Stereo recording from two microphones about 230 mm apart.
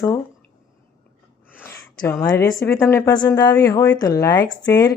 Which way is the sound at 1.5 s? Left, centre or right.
Centre.